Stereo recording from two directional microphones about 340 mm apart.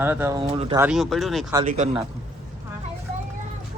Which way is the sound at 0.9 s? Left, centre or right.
Centre.